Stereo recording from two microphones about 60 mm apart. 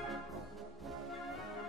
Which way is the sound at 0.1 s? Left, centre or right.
Centre.